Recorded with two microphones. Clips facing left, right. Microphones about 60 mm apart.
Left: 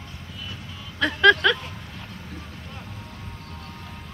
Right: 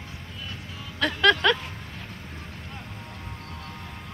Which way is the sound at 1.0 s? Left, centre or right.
Centre.